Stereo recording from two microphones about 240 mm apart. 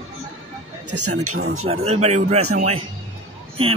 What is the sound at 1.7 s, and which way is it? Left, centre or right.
Speech, right.